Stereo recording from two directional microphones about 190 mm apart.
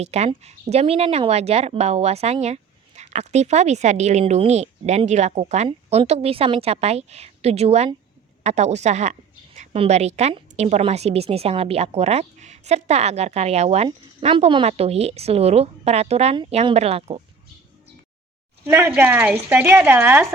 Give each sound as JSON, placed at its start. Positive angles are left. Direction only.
{"t": 0.0, "sound": "speech", "side_deg": -35}
{"t": 18.6, "sound": "speech", "side_deg": -10}